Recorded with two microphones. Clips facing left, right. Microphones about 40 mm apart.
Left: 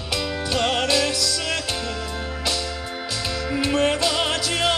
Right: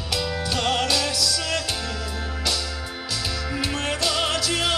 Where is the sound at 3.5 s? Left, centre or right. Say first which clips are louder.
Left 8 dB; centre.